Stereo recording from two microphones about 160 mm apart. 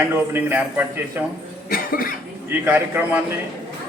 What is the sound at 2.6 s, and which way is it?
Speech, 10° right (ahead or behind).